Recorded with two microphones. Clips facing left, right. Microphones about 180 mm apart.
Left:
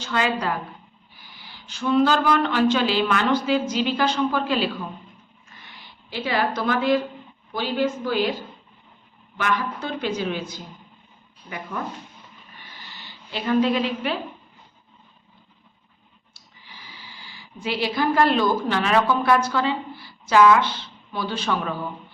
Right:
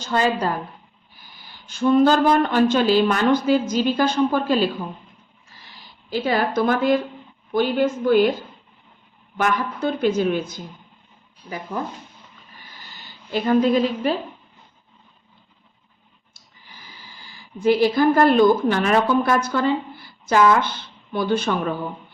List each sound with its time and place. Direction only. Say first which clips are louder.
0.0 s a woman's voice: right 3 dB; 40° right (ahead or behind)
5.5 s a sound: even; 35° right (ahead or behind)
7.5 s a woman's voice: right 4 dB; 50° right (ahead or behind)
9.4 s a woman's voice: right 4 dB; 45° right (ahead or behind)
11.4 s a woman's voice: right 3 dB; 35° right (ahead or behind)
12.5 s a sound: even; 45° right (ahead or behind)
16.3 s speech: even; 45° right (ahead or behind)